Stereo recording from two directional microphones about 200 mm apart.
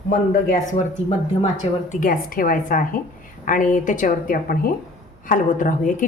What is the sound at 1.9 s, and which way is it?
A woman's voice, 45° left (ahead or behind).